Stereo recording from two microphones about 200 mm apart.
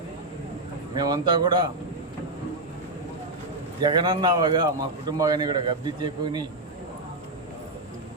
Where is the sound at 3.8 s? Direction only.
20° right (ahead or behind).